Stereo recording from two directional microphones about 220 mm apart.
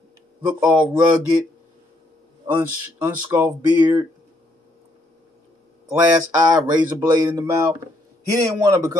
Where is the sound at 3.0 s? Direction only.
10° right (ahead or behind).